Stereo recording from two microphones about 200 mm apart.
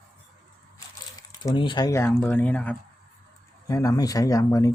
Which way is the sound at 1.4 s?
25° left (ahead or behind).